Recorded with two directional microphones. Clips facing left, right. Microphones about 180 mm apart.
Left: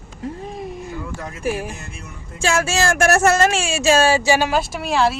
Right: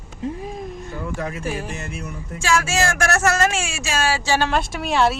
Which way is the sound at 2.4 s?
25° left (ahead or behind).